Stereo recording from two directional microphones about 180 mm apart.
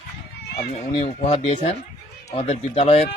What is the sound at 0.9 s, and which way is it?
Speech, 30° left (ahead or behind).